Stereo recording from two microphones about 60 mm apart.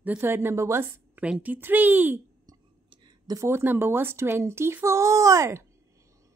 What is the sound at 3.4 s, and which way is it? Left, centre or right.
Speech, right.